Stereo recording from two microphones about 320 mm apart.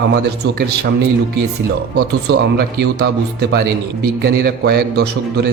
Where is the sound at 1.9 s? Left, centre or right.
Right.